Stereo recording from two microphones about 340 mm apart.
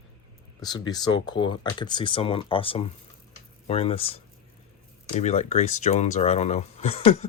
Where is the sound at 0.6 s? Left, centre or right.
Centre.